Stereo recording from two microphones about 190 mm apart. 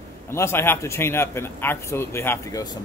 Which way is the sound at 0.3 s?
15° left (ahead or behind).